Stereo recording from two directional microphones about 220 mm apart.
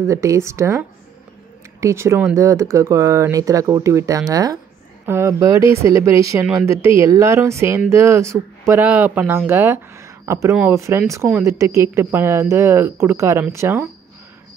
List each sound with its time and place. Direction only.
0.0 s speech: 15° right (ahead or behind)